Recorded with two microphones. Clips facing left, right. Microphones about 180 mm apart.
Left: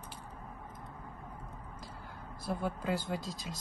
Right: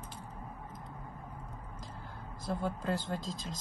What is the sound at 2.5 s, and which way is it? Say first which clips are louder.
Speech: even; 10° left (ahead or behind).